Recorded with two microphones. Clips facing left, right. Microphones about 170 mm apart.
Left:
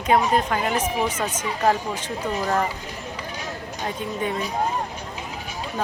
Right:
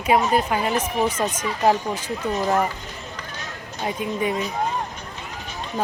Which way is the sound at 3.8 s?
10° right (ahead or behind).